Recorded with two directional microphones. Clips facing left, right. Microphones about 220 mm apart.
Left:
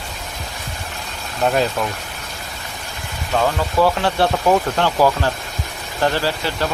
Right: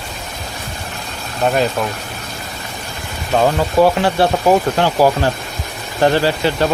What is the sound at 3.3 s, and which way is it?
Speech, 20° right (ahead or behind).